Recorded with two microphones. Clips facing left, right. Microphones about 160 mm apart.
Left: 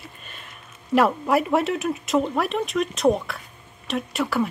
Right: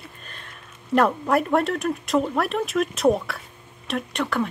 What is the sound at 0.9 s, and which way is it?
Speech, 5° left (ahead or behind).